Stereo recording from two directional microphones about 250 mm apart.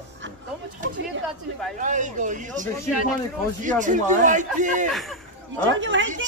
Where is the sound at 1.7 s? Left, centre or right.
Right.